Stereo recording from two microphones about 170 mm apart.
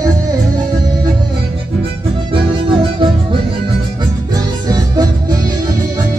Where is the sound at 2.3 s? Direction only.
30° right (ahead or behind).